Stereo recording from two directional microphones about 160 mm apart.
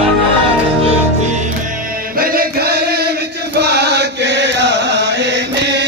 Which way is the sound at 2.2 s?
70° right (ahead or behind).